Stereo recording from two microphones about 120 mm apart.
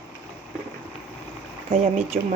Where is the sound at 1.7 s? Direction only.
90° right.